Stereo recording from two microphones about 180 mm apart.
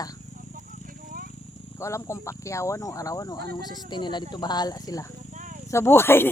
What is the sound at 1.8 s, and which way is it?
Speech, 15° left (ahead or behind).